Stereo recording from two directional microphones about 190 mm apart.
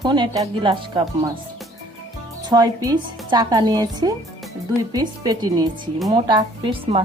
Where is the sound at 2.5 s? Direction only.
20° right (ahead or behind).